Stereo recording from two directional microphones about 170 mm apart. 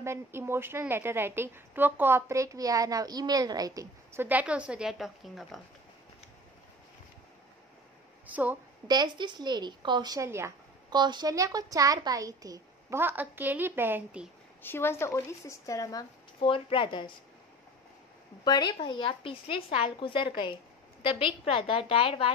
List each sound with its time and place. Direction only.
0.0 s a woman's voice: 15° right (ahead or behind)
8.3 s a woman's voice: 10° right (ahead or behind)
8.8 s a woman's voice: 25° right (ahead or behind); by 14.3 s 10° right (ahead or behind)
14.6 s speech: 15° left (ahead or behind); by 17.1 s 30° left (ahead or behind)
18.4 s a woman's voice: 25° left (ahead or behind)